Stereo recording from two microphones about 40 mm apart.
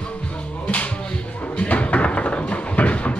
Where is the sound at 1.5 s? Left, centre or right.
Left.